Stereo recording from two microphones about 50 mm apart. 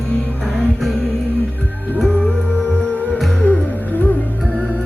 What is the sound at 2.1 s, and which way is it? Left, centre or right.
Music, left.